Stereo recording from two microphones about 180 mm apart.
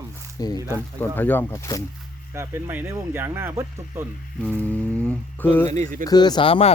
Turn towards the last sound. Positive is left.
turn(degrees=30)  # may be behind; listen again after turning